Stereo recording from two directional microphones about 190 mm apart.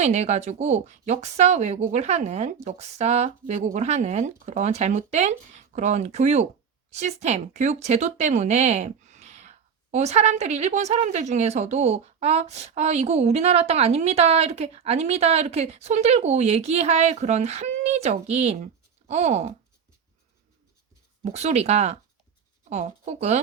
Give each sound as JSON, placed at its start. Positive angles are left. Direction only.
{"t": 0.0, "sound": "speech", "side_deg": -35}
{"t": 21.3, "sound": "speech", "side_deg": -35}